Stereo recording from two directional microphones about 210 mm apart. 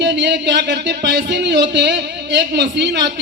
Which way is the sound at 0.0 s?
55° right (ahead or behind).